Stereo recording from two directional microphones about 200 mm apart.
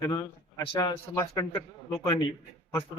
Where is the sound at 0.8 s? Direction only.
20° left (ahead or behind).